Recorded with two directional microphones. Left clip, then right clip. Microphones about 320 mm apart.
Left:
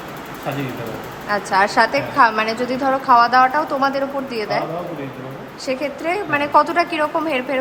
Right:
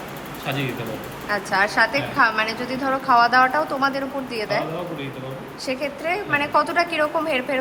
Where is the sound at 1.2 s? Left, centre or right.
Centre.